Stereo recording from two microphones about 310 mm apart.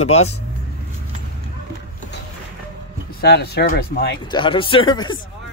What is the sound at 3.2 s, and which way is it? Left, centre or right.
Speech, left.